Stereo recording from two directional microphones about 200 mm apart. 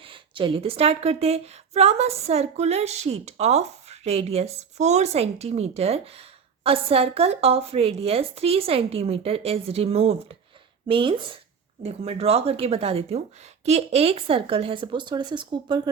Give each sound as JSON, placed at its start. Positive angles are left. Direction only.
{"t": 0.0, "sound": "a woman's voice", "side_deg": -25}